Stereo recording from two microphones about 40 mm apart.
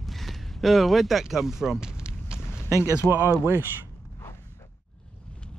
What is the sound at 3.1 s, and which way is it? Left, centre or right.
Speech, right.